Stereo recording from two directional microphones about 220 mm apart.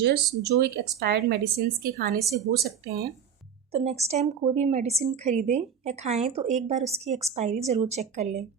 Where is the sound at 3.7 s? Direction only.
30° right (ahead or behind).